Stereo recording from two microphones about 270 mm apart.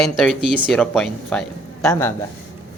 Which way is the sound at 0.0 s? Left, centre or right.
Centre.